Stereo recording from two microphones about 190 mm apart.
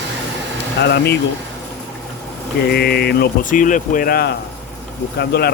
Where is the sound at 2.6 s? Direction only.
55° left (ahead or behind).